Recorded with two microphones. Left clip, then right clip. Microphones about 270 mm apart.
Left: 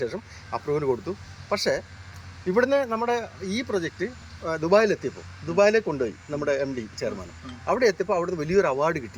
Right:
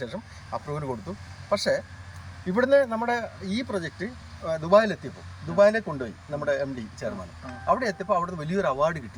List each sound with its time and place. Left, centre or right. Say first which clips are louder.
0.0 s speech: left 5 dB; centre